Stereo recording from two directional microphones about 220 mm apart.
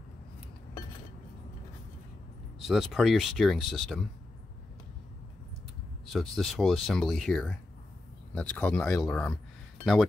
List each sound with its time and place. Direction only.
2.6 s speech: centre (ahead or behind)
6.1 s speech: centre (ahead or behind)